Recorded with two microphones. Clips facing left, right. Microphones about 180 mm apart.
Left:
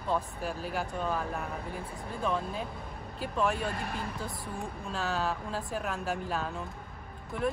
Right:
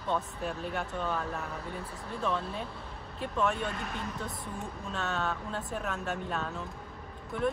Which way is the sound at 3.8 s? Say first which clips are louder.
Left 1 dB; 35° left (ahead or behind).